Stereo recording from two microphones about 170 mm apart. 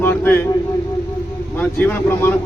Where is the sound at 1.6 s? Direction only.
10° left (ahead or behind).